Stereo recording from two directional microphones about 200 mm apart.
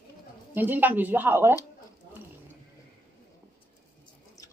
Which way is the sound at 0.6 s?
10° right (ahead or behind).